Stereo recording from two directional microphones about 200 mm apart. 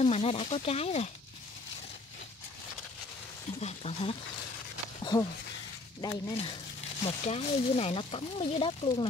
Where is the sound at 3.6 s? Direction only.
30° left (ahead or behind).